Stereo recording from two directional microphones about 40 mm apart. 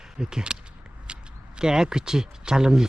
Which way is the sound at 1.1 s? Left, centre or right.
Right.